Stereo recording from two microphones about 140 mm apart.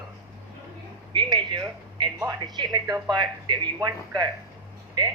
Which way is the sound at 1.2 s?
35° right (ahead or behind).